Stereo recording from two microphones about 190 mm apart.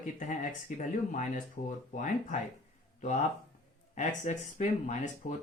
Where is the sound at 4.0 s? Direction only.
40° left (ahead or behind).